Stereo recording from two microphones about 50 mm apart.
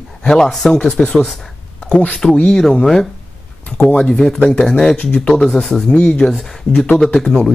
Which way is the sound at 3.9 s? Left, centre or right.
Centre.